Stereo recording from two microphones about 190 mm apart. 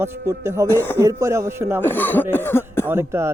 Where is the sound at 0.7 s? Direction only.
10° left (ahead or behind).